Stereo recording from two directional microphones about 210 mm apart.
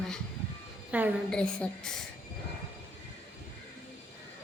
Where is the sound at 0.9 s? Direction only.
5° right (ahead or behind).